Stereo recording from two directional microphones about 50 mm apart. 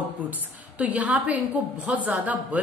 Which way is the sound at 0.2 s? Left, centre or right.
Right.